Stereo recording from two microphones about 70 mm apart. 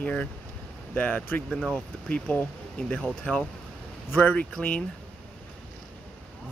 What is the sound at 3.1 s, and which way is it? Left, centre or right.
Speech, centre.